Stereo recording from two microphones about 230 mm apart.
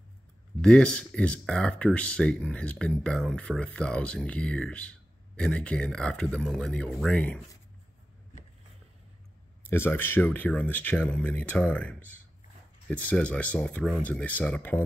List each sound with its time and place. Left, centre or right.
0.6 s speech: centre
9.7 s speech: centre